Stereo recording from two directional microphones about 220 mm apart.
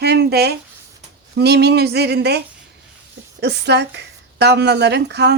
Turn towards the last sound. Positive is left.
turn(degrees=-50)  # may be behind; listen again after turning